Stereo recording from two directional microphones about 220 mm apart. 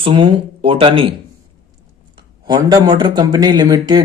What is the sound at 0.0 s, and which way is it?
A man's voice, 25° right (ahead or behind).